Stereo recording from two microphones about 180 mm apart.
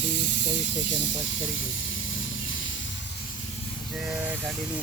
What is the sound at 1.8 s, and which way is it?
Music, 90° left.